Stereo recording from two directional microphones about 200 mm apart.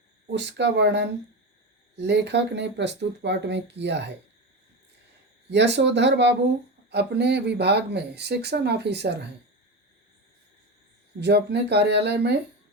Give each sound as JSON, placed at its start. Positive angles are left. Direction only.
{"t": 0.3, "sound": "speech", "side_deg": -55}
{"t": 5.5, "sound": "speech", "side_deg": -60}
{"t": 11.2, "sound": "speech", "side_deg": -55}